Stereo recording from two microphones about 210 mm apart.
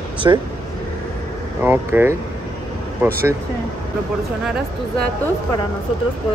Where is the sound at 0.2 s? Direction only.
15° right (ahead or behind).